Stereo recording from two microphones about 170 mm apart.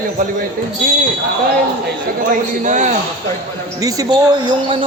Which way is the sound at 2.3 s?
45° right (ahead or behind).